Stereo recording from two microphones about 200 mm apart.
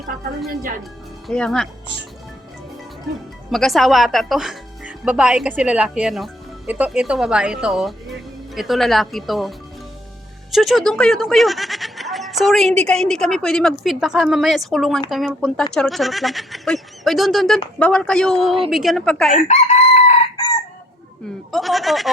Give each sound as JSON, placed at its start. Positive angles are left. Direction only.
{"t": 1.3, "sound": "speech", "side_deg": 5}
{"t": 3.5, "sound": "speech", "side_deg": 0}
{"t": 19.4, "sound": "chicken", "side_deg": 35}
{"t": 21.5, "sound": "speech", "side_deg": 0}